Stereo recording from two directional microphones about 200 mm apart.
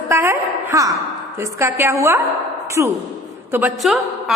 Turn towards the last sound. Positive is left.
turn(degrees=0)  # may be behind; listen again after turning